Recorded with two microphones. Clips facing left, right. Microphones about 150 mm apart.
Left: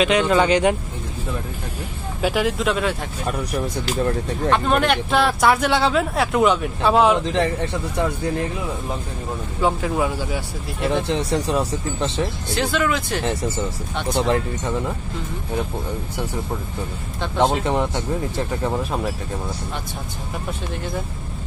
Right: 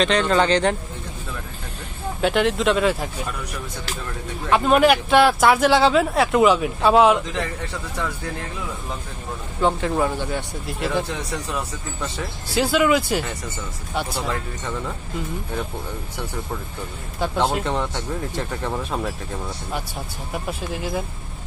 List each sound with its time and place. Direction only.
0.0 s speech: 10° left (ahead or behind)
2.2 s speech: centre (ahead or behind)
3.3 s speech: 40° left (ahead or behind)
4.5 s speech: 5° right (ahead or behind)
9.6 s speech: 5° left (ahead or behind)
11.1 s speech: 30° left (ahead or behind)
12.5 s speech: 5° right (ahead or behind)
13.2 s speech: 30° left (ahead or behind)
17.6 s speech: 15° left (ahead or behind)
20.7 s speech: 5° right (ahead or behind)